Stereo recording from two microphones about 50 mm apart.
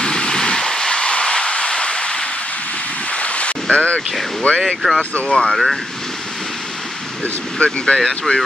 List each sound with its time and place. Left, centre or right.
0.0 s vehicle: centre
3.2 s ocean: left
3.7 s speech: left
4.6 s speech: centre
5.1 s speech: left
5.4 s speech: centre
7.5 s speech: centre